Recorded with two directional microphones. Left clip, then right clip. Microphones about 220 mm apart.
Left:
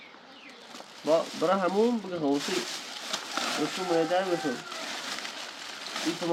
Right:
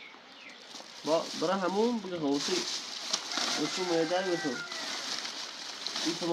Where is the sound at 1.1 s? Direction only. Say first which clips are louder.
Left 4 dB; 10° left (ahead or behind).